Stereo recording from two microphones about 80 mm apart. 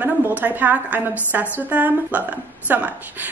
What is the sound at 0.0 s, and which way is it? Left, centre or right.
A woman's voice, right.